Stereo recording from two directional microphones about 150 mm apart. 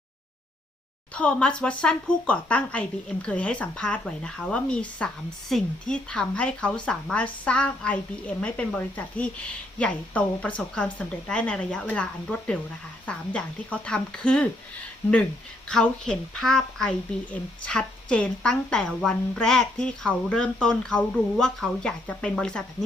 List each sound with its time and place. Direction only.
1.1 s speech: 10° left (ahead or behind)
13.1 s speech: 10° left (ahead or behind)
15.7 s a woman's voice: 5° left (ahead or behind)